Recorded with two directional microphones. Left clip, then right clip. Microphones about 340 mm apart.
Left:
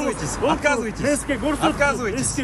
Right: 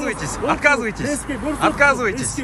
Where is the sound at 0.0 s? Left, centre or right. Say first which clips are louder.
Even; centre.